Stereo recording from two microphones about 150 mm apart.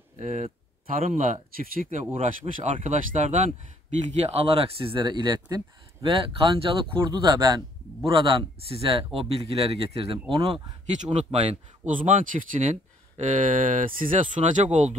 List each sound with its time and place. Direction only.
0.2 s speech: 50° right (ahead or behind)
0.9 s speech: 60° right (ahead or behind)
11.2 s speech: 40° right (ahead or behind)
12.0 s speech: 60° right (ahead or behind)